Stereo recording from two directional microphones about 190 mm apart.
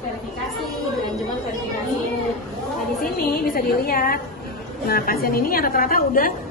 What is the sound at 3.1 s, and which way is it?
A woman's voice, 50° left (ahead or behind).